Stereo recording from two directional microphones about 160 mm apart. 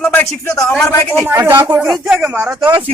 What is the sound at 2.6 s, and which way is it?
Speech, 25° right (ahead or behind).